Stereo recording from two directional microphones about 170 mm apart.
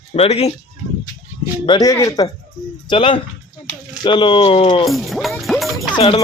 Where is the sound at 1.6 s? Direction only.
25° left (ahead or behind).